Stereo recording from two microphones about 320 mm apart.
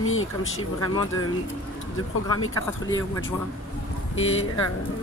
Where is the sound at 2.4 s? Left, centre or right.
Left.